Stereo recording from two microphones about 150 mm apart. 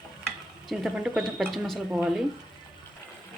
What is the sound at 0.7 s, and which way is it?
Speech, centre (ahead or behind).